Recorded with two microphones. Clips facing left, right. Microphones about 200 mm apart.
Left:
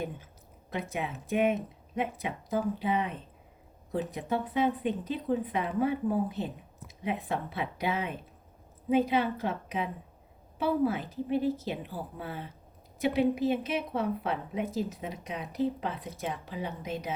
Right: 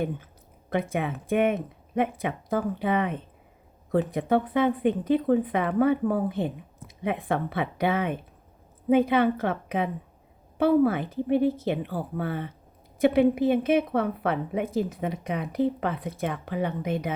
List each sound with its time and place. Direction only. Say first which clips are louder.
0.7 s a woman's voice: right 7 dB; 55° right (ahead or behind)